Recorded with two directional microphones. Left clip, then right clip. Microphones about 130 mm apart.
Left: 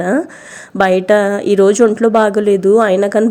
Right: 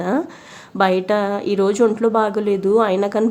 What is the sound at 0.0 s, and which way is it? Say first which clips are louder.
A woman's voice: left 5 dB; 30° left (ahead or behind).